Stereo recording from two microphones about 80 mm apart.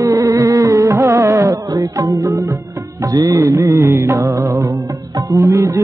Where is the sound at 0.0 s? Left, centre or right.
Right.